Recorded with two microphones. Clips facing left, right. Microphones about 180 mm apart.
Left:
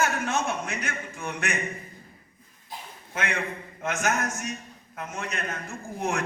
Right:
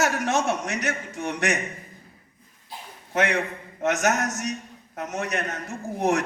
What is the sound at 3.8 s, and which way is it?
Speech, 75° right (ahead or behind).